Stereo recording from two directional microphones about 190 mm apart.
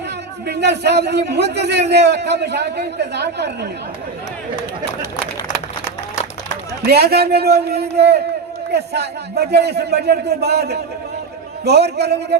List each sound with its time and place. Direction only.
0.4 s a man's voice: 60° right (ahead or behind)
6.8 s a man's voice: 55° right (ahead or behind)